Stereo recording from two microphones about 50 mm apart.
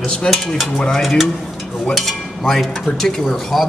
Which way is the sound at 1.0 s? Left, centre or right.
Centre.